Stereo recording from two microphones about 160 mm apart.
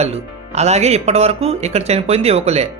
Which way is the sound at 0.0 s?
40° right (ahead or behind).